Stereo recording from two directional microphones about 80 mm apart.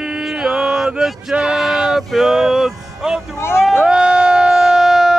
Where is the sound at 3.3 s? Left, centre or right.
Left.